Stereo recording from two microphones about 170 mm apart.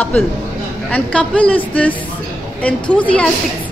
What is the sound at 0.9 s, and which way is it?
A woman's voice, 5° left (ahead or behind).